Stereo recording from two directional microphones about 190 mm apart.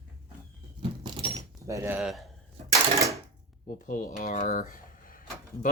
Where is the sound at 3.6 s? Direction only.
45° left (ahead or behind).